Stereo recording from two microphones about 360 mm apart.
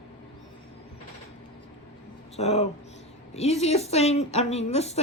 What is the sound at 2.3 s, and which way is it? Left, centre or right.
Speech, centre.